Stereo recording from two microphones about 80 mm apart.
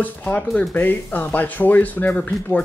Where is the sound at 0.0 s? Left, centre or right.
Left.